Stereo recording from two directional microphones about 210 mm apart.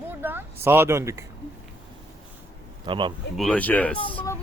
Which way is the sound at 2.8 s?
25° right (ahead or behind).